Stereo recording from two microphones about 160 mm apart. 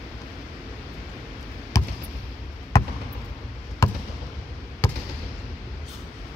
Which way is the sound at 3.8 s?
15° left (ahead or behind).